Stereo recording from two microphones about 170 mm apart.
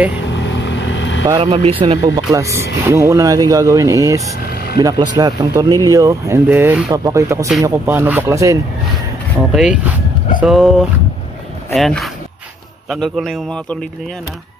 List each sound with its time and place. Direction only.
0.3 s vehicle: 90° left
1.4 s speech: 35° right (ahead or behind)
2.0 s speech: 20° right (ahead or behind)
9.5 s a man's voice: 5° right (ahead or behind)